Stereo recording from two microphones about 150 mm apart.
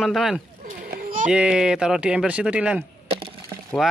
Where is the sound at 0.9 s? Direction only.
65° right (ahead or behind).